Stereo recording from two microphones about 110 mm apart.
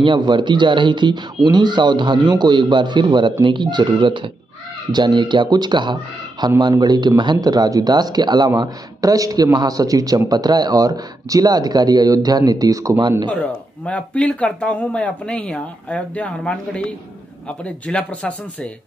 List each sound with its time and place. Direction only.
0.0 s a man's voice: 45° right (ahead or behind); by 13.2 s 25° right (ahead or behind)
13.3 s speech: 15° left (ahead or behind)